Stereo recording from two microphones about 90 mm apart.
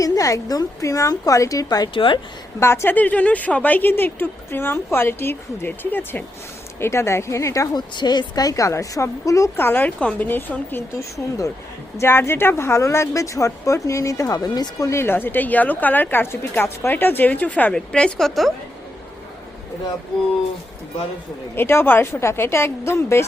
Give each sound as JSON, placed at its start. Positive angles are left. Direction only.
{"t": 0.0, "sound": "speech", "side_deg": 40}
{"t": 1.9, "sound": "speech", "side_deg": 75}
{"t": 2.6, "sound": "speech", "side_deg": 30}
{"t": 7.7, "sound": "speech", "side_deg": 50}
{"t": 9.6, "sound": "speech", "side_deg": 25}
{"t": 11.9, "sound": "speech", "side_deg": 30}
{"t": 14.8, "sound": "a woman's voice", "side_deg": 30}
{"t": 21.5, "sound": "speech", "side_deg": 25}